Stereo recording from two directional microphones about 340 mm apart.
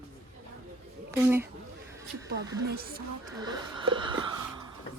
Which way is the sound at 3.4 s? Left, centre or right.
Centre.